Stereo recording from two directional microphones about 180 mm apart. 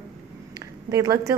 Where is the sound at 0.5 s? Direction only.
20° right (ahead or behind).